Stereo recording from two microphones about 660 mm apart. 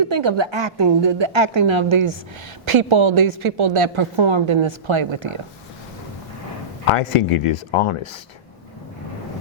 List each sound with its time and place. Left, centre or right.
0.1 s a woman's voice: right
6.9 s speech: left